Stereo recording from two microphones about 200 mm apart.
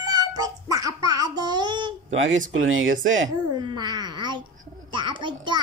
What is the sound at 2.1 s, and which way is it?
Speech, 70° right (ahead or behind).